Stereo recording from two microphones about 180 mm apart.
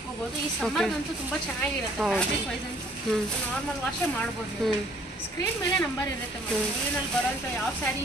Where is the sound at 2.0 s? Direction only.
Centre (ahead or behind).